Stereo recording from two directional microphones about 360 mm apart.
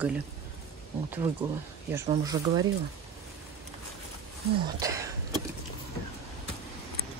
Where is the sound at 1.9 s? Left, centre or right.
Centre.